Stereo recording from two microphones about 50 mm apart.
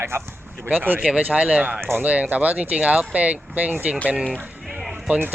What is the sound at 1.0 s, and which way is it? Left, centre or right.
Speech, right.